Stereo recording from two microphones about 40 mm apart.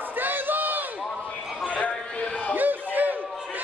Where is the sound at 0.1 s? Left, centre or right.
Right.